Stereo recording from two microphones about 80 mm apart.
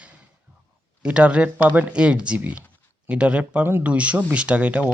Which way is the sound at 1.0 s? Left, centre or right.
Centre.